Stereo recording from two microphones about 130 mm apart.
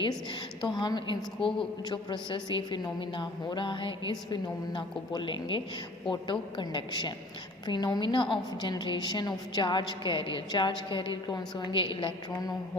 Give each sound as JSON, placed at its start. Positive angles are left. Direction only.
{"t": 0.6, "sound": "a woman's voice", "side_deg": 35}